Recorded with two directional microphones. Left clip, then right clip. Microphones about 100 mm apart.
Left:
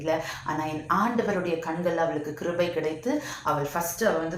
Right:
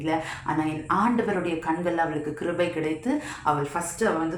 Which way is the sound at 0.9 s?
30° right (ahead or behind).